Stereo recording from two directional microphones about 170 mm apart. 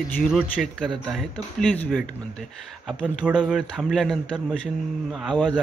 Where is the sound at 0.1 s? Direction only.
Centre (ahead or behind).